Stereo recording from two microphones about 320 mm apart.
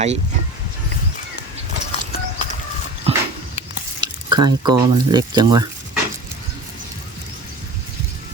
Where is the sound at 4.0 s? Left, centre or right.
Centre.